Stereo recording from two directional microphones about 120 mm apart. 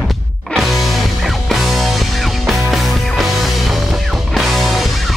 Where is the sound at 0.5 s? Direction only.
Centre (ahead or behind).